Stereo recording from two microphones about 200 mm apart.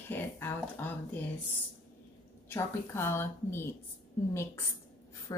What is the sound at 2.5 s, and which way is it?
A woman's voice, 10° left (ahead or behind).